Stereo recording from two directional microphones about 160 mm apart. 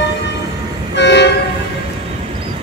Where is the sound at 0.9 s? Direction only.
90° left.